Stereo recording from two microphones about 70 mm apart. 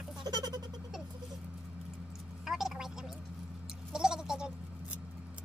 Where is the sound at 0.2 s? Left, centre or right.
Right.